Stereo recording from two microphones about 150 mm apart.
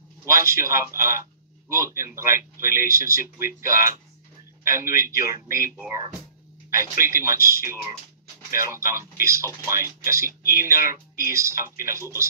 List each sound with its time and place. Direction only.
0.2 s a man's voice: 20° right (ahead or behind)